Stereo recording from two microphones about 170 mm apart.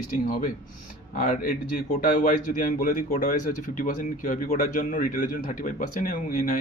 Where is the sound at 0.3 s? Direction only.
55° left (ahead or behind).